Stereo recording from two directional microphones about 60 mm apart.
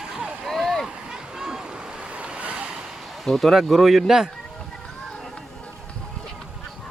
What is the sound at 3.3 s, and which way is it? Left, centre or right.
Speech, centre.